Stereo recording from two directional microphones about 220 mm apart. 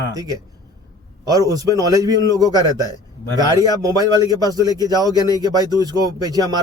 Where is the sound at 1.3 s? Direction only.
15° right (ahead or behind).